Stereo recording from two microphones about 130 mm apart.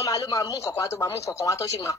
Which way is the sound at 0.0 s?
25° left (ahead or behind).